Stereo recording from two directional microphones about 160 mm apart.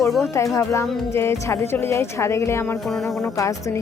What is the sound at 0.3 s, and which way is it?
Speech, 20° left (ahead or behind).